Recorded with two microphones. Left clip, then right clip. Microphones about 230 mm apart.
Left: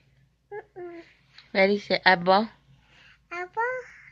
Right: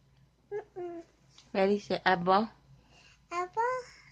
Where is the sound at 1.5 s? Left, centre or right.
Centre.